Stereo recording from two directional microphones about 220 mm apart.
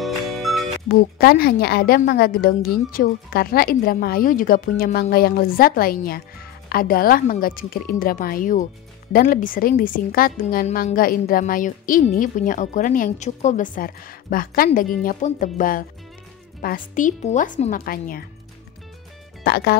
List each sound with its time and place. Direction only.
0.0 s music: centre (ahead or behind)
0.8 s a woman's voice: 45° left (ahead or behind)
19.4 s a woman's voice: 45° left (ahead or behind)